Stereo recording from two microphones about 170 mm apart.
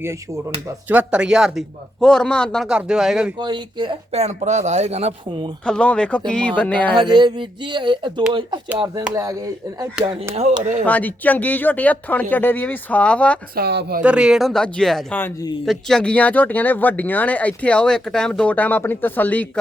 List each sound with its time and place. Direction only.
0.9 s speech: 10° right (ahead or behind)
3.3 s speech: 25° right (ahead or behind)
5.6 s speech: 5° left (ahead or behind)
6.9 s speech: 25° right (ahead or behind)
10.0 s speech: 30° right (ahead or behind)
10.8 s speech: 10° left (ahead or behind)
13.6 s speech: 75° right (ahead or behind)
14.0 s speech: 5° right (ahead or behind)
15.2 s a man's voice: 20° left (ahead or behind)
15.6 s speech: centre (ahead or behind)